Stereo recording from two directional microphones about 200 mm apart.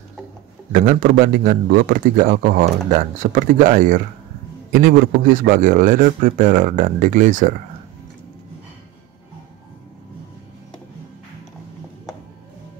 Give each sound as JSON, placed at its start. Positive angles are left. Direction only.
{"t": 0.7, "sound": "a man's voice", "side_deg": -45}